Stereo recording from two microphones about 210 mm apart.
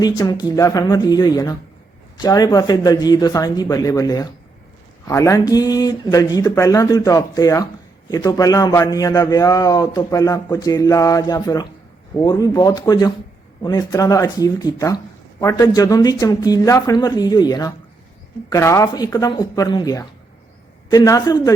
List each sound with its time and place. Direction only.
0.0 s speech: 20° left (ahead or behind)